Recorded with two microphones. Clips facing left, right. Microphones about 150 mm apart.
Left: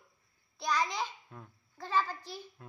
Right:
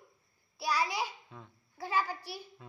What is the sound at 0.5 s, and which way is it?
Child singing, 10° right (ahead or behind).